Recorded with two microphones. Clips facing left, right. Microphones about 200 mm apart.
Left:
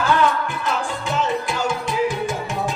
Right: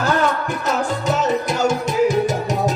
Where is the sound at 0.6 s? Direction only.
40° right (ahead or behind).